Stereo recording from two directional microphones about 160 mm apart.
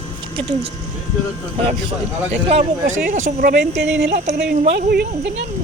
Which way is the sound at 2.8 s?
55° right (ahead or behind).